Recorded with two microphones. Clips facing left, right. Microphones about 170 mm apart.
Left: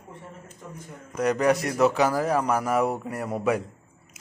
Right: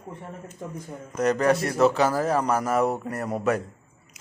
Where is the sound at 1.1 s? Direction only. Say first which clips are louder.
Right 1 dB; 10° left (ahead or behind).